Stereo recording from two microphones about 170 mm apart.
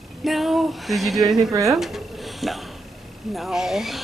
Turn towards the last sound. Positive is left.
turn(degrees=0)  # may be behind; listen again after turning